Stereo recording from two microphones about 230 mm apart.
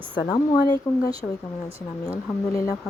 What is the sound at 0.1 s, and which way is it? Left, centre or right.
Speech, centre.